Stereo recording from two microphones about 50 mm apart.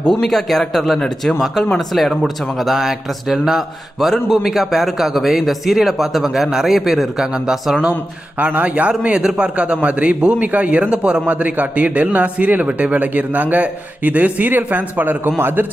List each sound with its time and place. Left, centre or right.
0.1 s speech: centre
8.4 s a man's voice: right
15.3 s a man's voice: right